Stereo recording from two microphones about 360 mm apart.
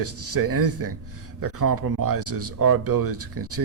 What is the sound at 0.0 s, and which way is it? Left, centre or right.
A man's voice, right.